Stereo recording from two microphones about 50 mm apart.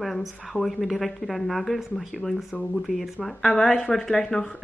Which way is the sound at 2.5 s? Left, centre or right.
Left.